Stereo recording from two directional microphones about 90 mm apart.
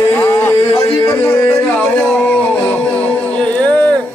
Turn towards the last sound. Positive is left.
turn(degrees=15)  # may be behind; listen again after turning